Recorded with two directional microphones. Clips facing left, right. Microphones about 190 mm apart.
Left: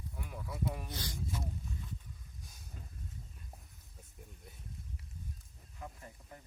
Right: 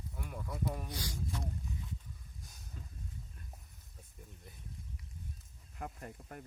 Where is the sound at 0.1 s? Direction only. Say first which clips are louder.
Right 2 dB; centre (ahead or behind).